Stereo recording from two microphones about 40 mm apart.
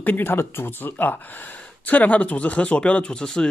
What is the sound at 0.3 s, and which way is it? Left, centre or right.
Speech, left.